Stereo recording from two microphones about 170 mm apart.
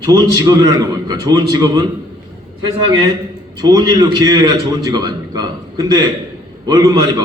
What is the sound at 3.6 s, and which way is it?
A man's voice, 20° right (ahead or behind).